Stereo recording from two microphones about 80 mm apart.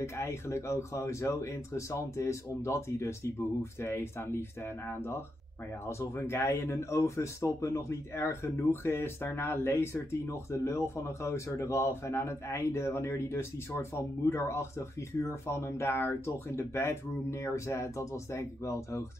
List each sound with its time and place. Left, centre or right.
0.0 s speech: left